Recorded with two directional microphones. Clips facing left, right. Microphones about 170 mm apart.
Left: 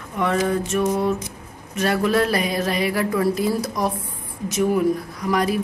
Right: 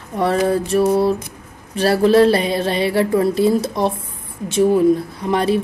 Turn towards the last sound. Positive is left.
turn(degrees=-30)  # may be behind; listen again after turning